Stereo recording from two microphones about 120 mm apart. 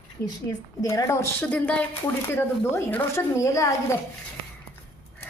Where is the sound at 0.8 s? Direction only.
30° left (ahead or behind).